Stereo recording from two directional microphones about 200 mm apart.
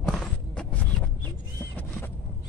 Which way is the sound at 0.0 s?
5° left (ahead or behind).